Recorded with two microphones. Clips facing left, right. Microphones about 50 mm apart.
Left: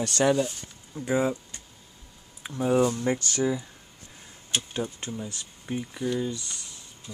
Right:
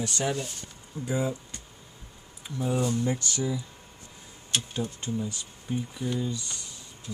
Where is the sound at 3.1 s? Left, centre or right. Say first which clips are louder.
Left 4 dB; left.